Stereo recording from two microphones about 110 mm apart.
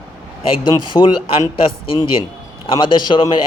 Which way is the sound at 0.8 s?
45° left (ahead or behind).